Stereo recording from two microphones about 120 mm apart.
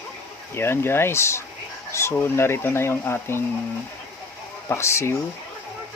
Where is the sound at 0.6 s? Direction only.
20° left (ahead or behind).